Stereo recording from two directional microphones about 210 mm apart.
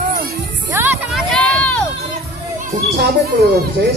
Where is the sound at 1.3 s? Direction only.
5° left (ahead or behind).